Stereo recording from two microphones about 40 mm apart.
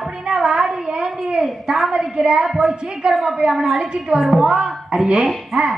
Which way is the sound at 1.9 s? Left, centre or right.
Centre.